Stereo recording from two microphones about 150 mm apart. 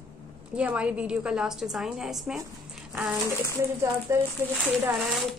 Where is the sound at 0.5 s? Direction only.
10° right (ahead or behind).